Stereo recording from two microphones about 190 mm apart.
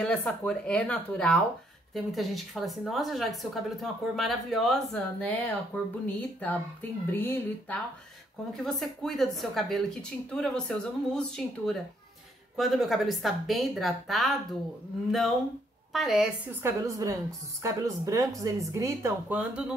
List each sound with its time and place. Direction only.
0.0 s a woman's voice: 5° left (ahead or behind)
8.5 s a woman's voice: centre (ahead or behind)
16.6 s a woman's voice: 15° right (ahead or behind)